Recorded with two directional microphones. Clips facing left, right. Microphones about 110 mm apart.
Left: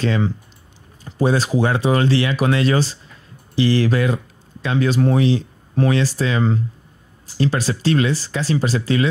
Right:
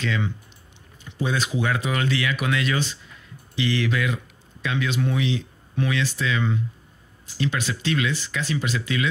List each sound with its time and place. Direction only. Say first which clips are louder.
0.0 s speech: left 7 dB; 35° left (ahead or behind)